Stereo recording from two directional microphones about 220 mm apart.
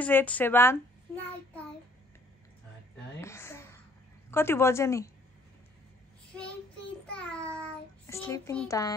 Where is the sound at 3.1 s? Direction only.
10° left (ahead or behind).